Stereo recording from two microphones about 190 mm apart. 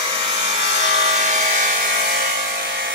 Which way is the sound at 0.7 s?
35° right (ahead or behind).